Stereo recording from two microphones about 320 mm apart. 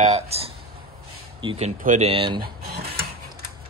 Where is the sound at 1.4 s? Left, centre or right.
Centre.